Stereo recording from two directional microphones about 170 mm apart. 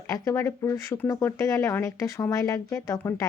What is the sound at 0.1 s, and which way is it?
A woman's voice, 15° left (ahead or behind).